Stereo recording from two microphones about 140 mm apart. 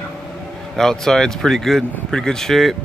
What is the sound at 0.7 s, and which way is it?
Speech, 5° left (ahead or behind).